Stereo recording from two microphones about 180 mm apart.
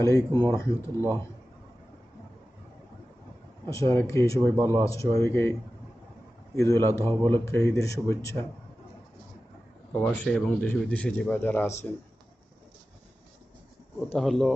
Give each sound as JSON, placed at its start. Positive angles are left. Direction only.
{"t": 0.0, "sound": "speech", "side_deg": 15}
{"t": 3.7, "sound": "speech", "side_deg": 15}
{"t": 6.6, "sound": "speech", "side_deg": 15}
{"t": 9.9, "sound": "speech", "side_deg": 5}
{"t": 14.1, "sound": "speech", "side_deg": 0}